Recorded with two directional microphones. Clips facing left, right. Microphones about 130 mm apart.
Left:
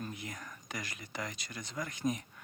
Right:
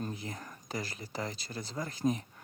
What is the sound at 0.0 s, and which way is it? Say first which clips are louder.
Speech: right 3 dB; 30° right (ahead or behind).